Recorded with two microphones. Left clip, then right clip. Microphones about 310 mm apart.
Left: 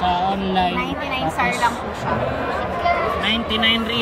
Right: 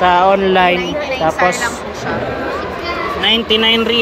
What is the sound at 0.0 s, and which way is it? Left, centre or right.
Speech, right.